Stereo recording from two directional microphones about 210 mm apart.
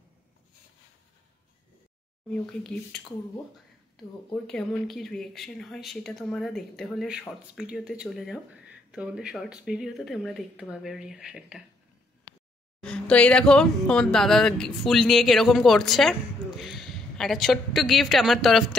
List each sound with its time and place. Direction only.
3.9 s speech: 5° left (ahead or behind)
12.3 s a sound: 25° left (ahead or behind)
12.8 s speech: 5° left (ahead or behind)